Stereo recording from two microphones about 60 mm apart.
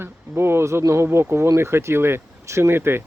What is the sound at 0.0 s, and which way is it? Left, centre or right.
Speech, right.